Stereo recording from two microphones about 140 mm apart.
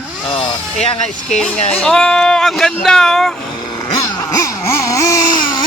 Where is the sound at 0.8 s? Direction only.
55° left (ahead or behind).